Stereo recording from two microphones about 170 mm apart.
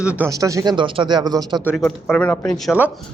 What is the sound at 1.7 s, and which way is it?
Speech, 5° left (ahead or behind).